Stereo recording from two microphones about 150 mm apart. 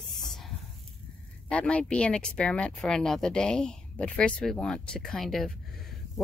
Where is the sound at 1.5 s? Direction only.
10° left (ahead or behind).